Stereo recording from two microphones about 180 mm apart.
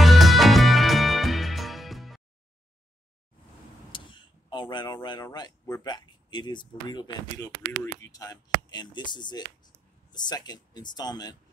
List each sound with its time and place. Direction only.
0.0 s music: centre (ahead or behind)
3.9 s speech: 25° left (ahead or behind)